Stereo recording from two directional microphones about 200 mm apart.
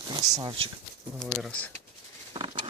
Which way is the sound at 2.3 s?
25° right (ahead or behind).